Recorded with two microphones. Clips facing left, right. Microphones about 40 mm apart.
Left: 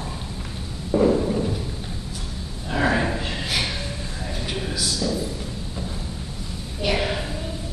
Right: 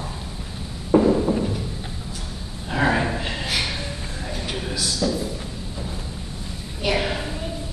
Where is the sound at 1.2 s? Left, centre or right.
Centre.